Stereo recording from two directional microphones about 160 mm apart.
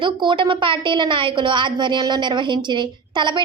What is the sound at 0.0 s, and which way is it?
A woman's voice, 30° right (ahead or behind).